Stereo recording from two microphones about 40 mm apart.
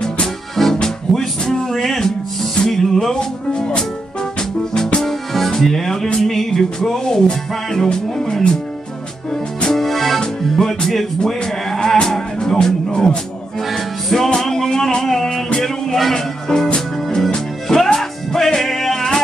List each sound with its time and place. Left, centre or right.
0.8 s music: centre
3.2 s music: centre
5.0 s music: centre
9.8 s music: centre
11.2 s speech: centre
13.6 s music: centre